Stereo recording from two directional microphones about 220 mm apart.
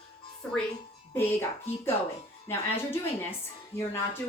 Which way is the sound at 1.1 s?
10° left (ahead or behind).